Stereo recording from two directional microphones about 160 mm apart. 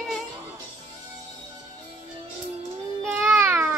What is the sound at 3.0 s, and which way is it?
Babbling, 10° right (ahead or behind).